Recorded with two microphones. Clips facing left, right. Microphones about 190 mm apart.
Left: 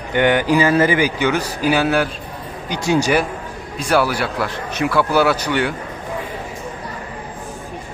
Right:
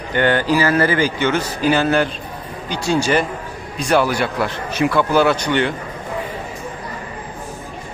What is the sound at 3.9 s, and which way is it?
A man's voice, 5° left (ahead or behind).